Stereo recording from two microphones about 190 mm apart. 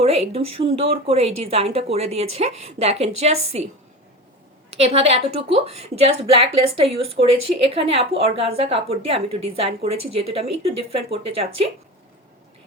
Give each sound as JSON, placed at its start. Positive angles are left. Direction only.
{"t": 0.0, "sound": "a woman's voice", "side_deg": -30}
{"t": 4.8, "sound": "a woman's voice", "side_deg": -30}